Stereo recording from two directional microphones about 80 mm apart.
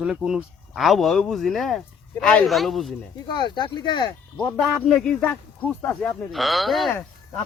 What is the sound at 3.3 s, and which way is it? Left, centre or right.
Speech, left.